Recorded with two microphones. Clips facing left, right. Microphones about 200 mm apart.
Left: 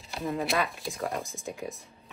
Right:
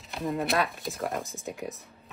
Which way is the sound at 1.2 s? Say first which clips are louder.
Even; 15° left (ahead or behind).